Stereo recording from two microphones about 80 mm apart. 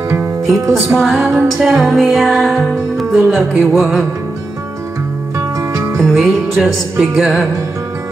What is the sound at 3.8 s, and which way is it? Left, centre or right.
Music, centre.